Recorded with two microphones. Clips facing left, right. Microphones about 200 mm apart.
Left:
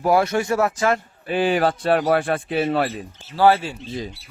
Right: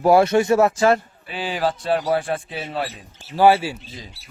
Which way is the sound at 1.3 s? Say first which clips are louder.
Left 5 dB; 55° left (ahead or behind).